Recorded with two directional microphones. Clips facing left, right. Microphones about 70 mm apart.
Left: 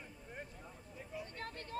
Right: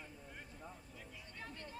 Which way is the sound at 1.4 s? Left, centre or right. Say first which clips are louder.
Left 1 dB; left.